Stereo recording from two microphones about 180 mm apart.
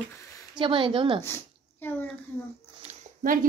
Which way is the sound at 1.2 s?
10° left (ahead or behind).